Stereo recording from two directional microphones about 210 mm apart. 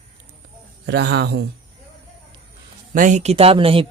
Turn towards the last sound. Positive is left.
turn(degrees=-25)  # may be behind; listen again after turning